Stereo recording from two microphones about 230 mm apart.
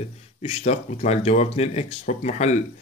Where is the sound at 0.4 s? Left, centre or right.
Left.